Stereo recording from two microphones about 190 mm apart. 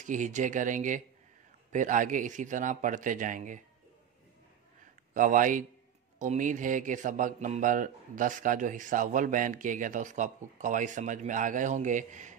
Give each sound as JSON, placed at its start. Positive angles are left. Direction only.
{"t": 0.0, "sound": "speech", "side_deg": -40}
{"t": 5.1, "sound": "speech", "side_deg": -45}